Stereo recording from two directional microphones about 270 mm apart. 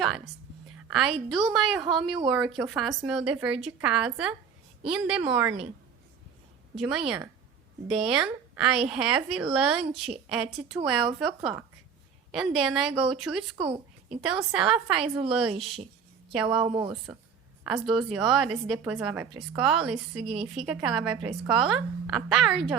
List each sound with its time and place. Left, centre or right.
0.9 s a woman's voice: centre
6.7 s a woman's voice: centre
13.6 s speech: right
14.2 s a woman's voice: centre
16.6 s a woman's voice: right
17.6 s a woman's voice: centre
20.3 s a woman's voice: right
20.7 s a woman's voice: centre